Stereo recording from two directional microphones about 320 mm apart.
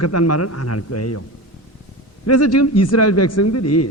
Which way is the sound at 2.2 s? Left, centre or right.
Left.